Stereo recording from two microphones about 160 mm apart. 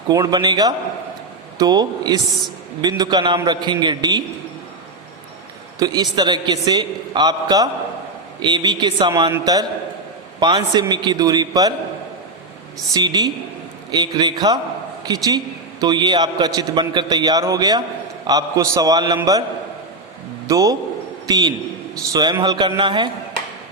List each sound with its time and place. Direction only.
0.1 s a man's voice: 25° right (ahead or behind)
5.8 s a man's voice: 25° right (ahead or behind)
12.9 s a man's voice: 25° right (ahead or behind)
20.5 s a man's voice: 20° right (ahead or behind)